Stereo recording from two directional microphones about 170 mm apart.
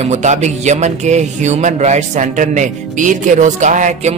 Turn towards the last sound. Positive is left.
turn(degrees=-45)  # may be behind; listen again after turning